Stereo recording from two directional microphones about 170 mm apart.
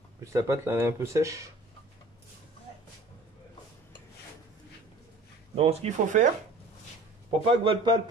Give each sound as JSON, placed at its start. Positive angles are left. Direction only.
{"t": 0.2, "sound": "speech", "side_deg": -20}
{"t": 5.6, "sound": "speech", "side_deg": -40}
{"t": 7.4, "sound": "speech", "side_deg": -30}